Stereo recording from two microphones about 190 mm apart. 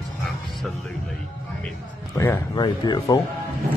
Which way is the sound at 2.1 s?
15° left (ahead or behind).